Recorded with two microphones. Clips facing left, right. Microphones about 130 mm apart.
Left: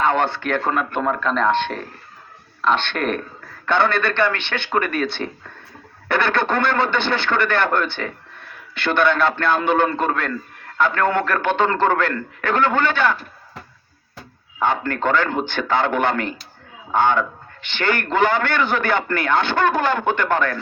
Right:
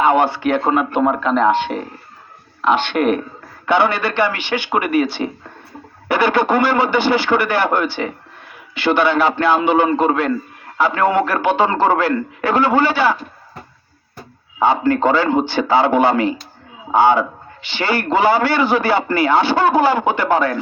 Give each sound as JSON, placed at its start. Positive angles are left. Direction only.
{"t": 0.0, "sound": "a man's voice", "side_deg": -5}
{"t": 6.1, "sound": "a man's voice", "side_deg": -5}
{"t": 14.6, "sound": "a man's voice", "side_deg": -10}